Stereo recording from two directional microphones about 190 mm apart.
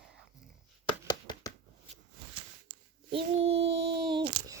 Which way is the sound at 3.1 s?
30° right (ahead or behind).